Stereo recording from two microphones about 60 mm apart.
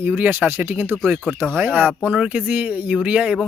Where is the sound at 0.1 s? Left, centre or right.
Right.